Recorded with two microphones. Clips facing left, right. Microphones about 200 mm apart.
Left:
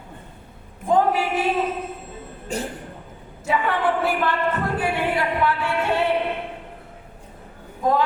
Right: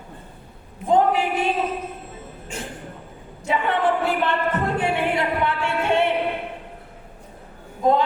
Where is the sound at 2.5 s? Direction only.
40° left (ahead or behind).